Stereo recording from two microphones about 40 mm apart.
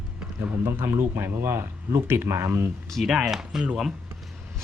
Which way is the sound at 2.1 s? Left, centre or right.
Right.